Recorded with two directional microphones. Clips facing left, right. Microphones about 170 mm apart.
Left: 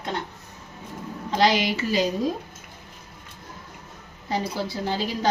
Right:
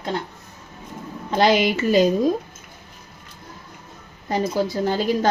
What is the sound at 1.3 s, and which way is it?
Speech, 55° right (ahead or behind).